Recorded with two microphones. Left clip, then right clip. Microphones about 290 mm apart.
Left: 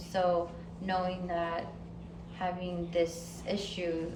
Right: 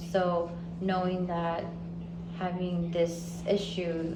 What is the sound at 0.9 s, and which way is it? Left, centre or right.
Speech, centre.